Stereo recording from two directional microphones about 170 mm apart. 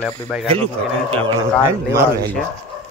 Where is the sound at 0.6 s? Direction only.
35° right (ahead or behind).